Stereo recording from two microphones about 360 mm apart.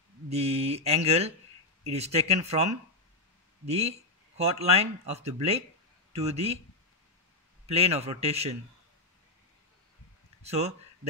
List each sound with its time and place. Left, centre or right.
0.3 s speech: centre
7.6 s speech: centre
10.4 s speech: centre